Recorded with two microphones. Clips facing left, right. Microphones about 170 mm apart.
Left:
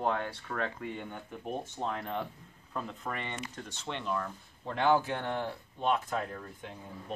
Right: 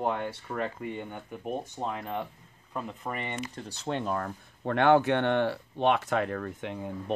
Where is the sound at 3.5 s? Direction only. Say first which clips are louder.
Right 7 dB; 35° right (ahead or behind).